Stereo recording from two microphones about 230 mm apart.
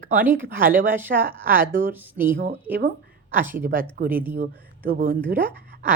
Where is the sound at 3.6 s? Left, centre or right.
Right.